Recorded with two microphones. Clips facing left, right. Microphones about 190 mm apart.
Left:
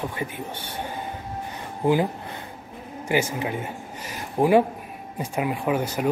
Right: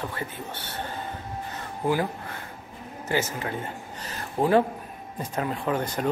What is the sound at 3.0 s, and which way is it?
Speech, 15° left (ahead or behind).